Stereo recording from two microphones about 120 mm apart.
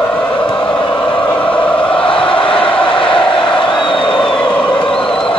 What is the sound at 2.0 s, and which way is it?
Crowd, 45° left (ahead or behind).